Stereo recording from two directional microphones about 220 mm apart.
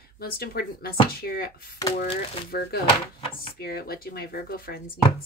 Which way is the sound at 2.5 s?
45° left (ahead or behind).